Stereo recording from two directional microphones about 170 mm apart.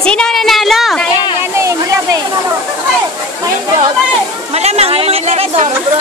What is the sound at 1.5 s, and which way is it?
Speech, 15° right (ahead or behind).